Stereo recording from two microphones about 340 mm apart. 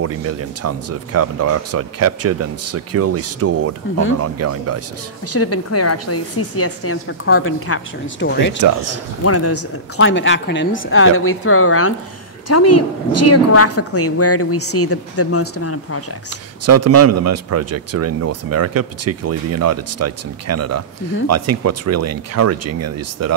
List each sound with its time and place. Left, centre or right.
0.0 s speech: right
5.3 s a woman's voice: left
9.2 s a woman's voice: left
16.6 s speech: right